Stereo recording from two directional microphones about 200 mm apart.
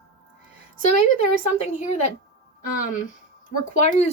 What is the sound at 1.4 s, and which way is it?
Speech, 35° left (ahead or behind).